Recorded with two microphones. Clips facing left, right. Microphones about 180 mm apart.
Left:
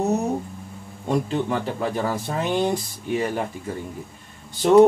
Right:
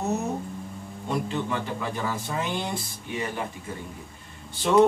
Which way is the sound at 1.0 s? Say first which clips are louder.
Left 5 dB; 40° left (ahead or behind).